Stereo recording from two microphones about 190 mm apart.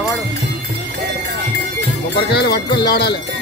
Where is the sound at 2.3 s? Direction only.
55° left (ahead or behind).